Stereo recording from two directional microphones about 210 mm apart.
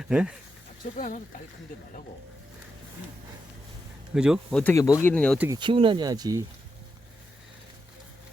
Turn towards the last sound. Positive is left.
turn(degrees=-15)  # may be behind; listen again after turning